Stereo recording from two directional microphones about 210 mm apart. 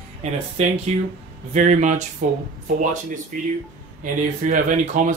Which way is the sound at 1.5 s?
35° right (ahead or behind).